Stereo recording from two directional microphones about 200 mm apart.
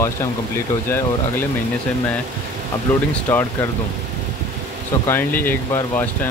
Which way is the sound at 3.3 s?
10° left (ahead or behind).